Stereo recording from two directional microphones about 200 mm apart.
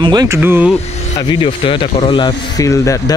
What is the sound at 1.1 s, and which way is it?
Speech, 25° left (ahead or behind).